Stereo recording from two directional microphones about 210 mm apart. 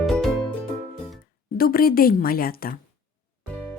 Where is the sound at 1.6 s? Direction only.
45° left (ahead or behind).